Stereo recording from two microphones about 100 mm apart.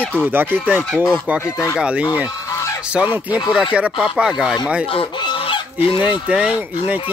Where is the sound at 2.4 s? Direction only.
30° left (ahead or behind).